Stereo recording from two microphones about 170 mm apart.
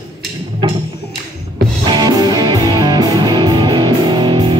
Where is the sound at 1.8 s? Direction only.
25° right (ahead or behind).